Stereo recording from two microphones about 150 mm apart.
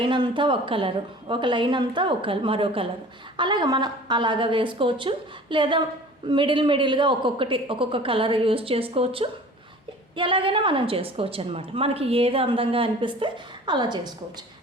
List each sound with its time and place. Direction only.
0.0 s a woman's voice: 30° right (ahead or behind)